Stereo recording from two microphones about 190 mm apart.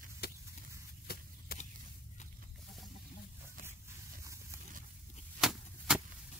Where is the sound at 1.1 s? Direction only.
55° left (ahead or behind).